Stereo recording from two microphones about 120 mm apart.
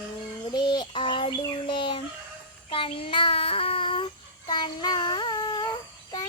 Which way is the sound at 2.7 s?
50° left (ahead or behind).